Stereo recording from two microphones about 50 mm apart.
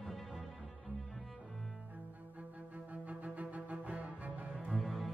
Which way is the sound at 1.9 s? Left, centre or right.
Right.